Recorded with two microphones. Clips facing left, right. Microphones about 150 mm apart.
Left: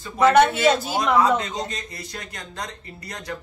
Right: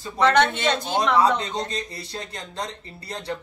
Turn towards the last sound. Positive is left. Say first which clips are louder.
# right 3 dB
turn(degrees=-30)  # may be behind; listen again after turning